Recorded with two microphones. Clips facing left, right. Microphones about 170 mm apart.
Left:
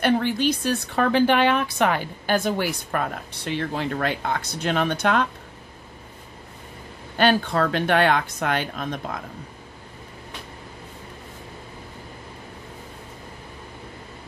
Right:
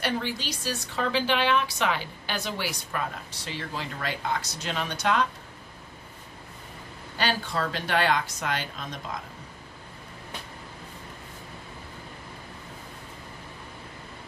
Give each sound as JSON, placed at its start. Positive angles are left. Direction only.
{"t": 0.0, "sound": "a woman's voice", "side_deg": 55}
{"t": 7.2, "sound": "a woman's voice", "side_deg": 55}